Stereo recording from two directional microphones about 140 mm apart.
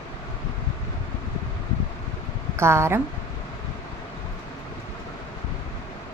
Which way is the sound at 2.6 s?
20° right (ahead or behind).